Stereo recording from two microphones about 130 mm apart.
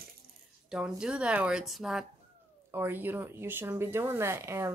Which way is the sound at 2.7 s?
15° right (ahead or behind).